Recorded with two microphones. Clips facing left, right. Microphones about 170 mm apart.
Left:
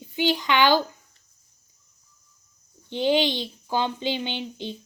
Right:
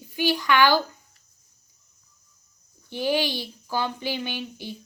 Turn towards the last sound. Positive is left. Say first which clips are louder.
# left 2 dB
turn(degrees=20)  # may be behind; listen again after turning